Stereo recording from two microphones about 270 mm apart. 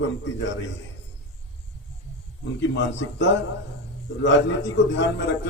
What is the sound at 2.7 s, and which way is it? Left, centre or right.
Speech, left.